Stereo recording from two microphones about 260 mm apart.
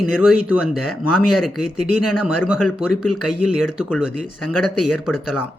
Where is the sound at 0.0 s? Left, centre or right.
Centre.